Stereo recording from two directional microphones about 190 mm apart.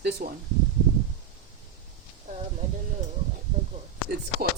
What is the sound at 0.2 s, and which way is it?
Speech, 45° right (ahead or behind).